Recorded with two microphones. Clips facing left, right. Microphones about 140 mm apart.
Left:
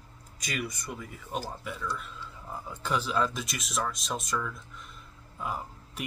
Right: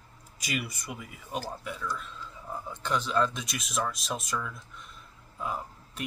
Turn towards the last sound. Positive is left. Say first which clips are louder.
# even
turn(degrees=0)  # may be behind; listen again after turning